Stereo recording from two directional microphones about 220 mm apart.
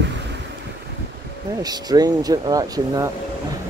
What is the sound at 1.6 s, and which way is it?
Speech, 15° right (ahead or behind).